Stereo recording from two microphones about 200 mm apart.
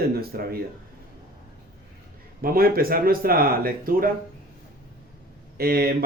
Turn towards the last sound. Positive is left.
turn(degrees=-50)  # may be behind; listen again after turning